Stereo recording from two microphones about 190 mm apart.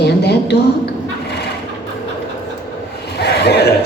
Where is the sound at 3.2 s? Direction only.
60° left (ahead or behind).